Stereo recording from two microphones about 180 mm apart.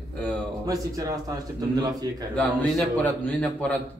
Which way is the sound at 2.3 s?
5° left (ahead or behind).